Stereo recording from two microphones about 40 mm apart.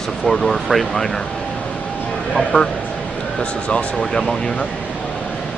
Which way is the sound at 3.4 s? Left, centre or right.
Left.